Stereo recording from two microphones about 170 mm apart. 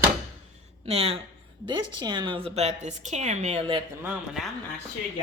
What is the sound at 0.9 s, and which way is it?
A woman's voice, 35° right (ahead or behind).